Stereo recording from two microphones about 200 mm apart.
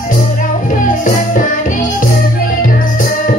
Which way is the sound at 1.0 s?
40° left (ahead or behind).